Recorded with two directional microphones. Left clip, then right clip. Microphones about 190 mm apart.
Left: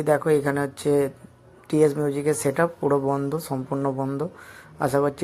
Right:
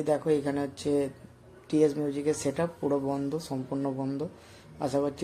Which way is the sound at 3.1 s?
15° left (ahead or behind).